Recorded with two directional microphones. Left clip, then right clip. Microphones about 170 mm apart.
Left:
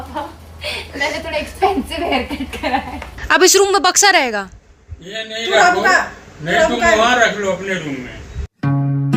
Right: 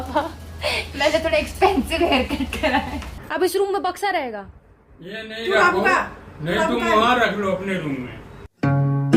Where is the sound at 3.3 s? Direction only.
20° left (ahead or behind).